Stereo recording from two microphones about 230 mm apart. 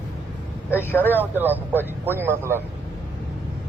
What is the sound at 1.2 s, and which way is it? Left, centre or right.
A man's voice, centre.